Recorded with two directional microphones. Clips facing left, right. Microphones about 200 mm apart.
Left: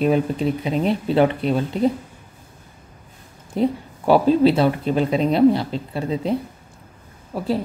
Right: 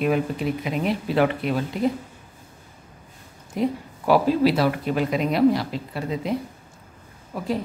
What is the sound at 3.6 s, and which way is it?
A woman's voice, 30° left (ahead or behind).